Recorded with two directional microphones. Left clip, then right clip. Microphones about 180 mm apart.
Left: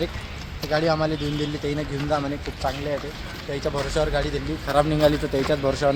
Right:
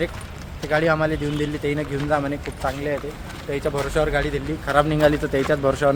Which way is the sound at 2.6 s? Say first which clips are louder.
Right 2 dB; 20° right (ahead or behind).